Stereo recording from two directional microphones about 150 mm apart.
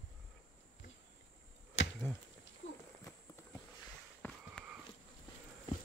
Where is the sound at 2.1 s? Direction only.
15° left (ahead or behind).